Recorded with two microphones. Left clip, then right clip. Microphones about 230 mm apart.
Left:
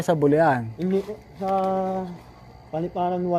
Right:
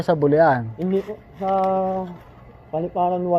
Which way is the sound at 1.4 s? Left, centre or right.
Centre.